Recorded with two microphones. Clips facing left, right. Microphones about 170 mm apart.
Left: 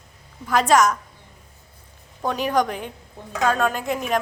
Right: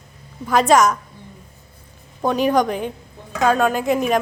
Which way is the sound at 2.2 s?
20° right (ahead or behind).